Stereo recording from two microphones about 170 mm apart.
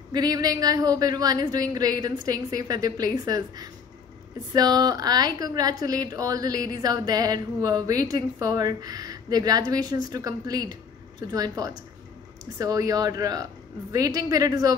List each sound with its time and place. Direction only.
0.1 s speech: 25° right (ahead or behind)